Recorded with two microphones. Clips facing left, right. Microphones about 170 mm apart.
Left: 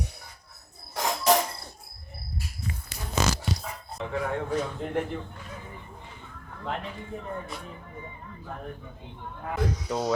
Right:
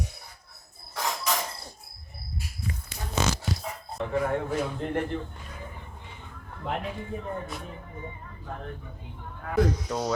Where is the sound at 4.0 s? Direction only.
5° right (ahead or behind).